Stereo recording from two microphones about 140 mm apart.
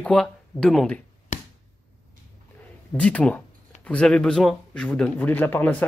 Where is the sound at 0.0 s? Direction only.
5° left (ahead or behind).